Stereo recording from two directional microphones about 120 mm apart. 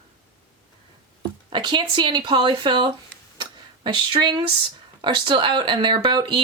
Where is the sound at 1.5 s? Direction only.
40° right (ahead or behind).